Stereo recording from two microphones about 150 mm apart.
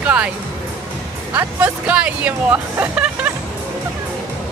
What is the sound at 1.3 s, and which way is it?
Speech, 15° right (ahead or behind).